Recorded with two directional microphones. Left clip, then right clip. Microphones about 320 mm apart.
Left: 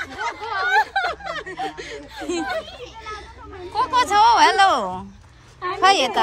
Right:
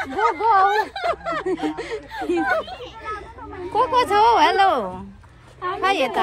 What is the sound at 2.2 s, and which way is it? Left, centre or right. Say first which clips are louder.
Speech: right 4 dB; centre.